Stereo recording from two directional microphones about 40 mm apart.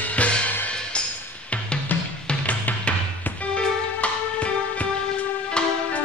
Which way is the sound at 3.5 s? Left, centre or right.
Left.